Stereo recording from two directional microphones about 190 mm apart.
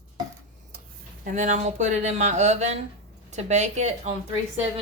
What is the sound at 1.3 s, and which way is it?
Speech, 40° right (ahead or behind).